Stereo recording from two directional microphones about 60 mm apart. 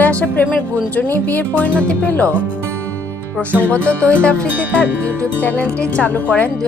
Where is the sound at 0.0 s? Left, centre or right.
Left.